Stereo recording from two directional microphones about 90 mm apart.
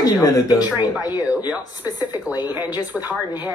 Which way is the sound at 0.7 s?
55° left (ahead or behind).